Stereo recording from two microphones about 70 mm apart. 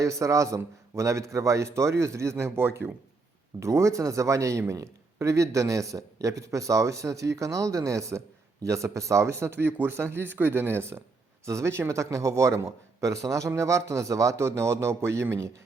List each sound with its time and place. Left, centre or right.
0.0 s a man's voice: right
3.6 s a man's voice: right